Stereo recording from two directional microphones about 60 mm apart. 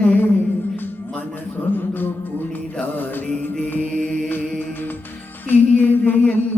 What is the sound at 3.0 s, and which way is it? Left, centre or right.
Mantra, left.